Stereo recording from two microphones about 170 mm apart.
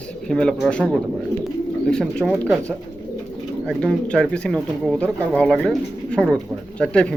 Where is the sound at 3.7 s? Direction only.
5° left (ahead or behind).